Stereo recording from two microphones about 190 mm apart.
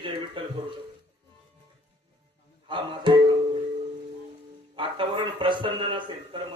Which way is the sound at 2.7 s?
25° right (ahead or behind).